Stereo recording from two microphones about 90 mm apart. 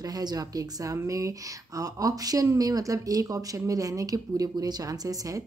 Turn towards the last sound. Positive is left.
turn(degrees=-40)  # may be behind; listen again after turning